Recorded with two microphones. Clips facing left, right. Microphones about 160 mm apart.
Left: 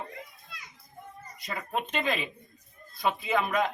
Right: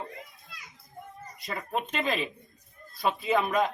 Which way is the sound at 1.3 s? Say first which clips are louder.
Right 1 dB; centre (ahead or behind).